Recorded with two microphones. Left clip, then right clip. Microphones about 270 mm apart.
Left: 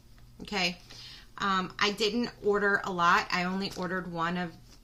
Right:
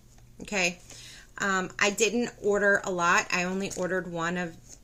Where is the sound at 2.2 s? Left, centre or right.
Centre.